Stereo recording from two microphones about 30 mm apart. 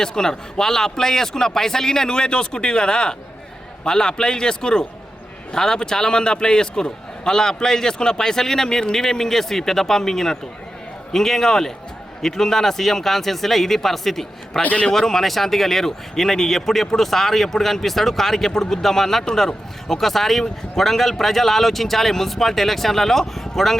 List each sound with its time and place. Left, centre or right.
0.0 s a man's voice: left
14.6 s a man's voice: left
14.9 s a man's voice: centre